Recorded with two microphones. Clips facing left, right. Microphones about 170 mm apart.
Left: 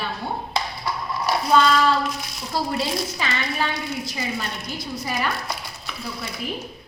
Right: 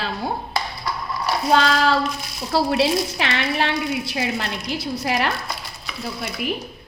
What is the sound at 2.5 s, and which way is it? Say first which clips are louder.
A woman's voice: right 6 dB; 75° right (ahead or behind).